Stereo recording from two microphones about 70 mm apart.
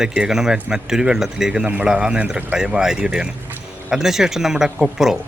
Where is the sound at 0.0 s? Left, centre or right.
Centre.